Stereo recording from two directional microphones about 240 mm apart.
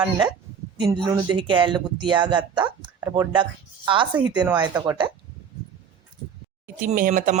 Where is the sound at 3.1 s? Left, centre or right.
Centre.